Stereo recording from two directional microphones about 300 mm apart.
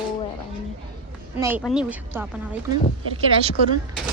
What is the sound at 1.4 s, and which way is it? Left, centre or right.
Speech, centre.